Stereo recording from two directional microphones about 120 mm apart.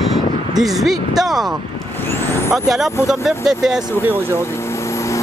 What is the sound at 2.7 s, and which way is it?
Speech, 5° right (ahead or behind).